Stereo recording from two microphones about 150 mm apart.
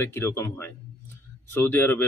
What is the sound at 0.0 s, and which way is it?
Speech, 15° left (ahead or behind).